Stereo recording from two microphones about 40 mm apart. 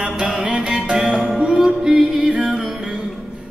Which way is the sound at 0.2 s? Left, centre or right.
Centre.